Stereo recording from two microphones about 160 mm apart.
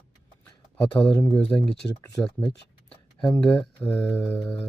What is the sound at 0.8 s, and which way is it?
Speech, 10° left (ahead or behind).